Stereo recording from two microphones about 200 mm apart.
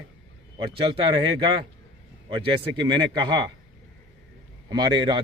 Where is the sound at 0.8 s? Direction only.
25° right (ahead or behind).